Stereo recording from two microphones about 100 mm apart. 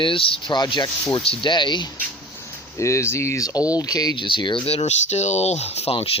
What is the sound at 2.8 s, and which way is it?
Speech, 30° left (ahead or behind).